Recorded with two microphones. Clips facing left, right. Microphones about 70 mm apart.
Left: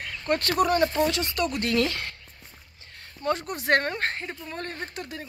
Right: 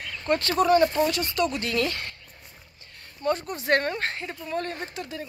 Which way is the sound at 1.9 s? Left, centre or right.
Left.